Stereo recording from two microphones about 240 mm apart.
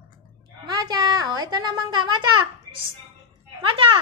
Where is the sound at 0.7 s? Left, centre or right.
Centre.